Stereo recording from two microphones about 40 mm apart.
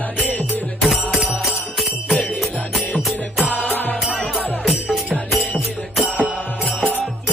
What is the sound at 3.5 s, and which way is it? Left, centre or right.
Music, left.